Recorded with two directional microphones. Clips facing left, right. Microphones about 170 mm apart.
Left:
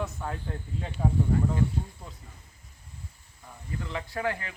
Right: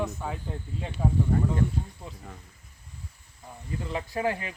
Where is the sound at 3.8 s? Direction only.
20° right (ahead or behind).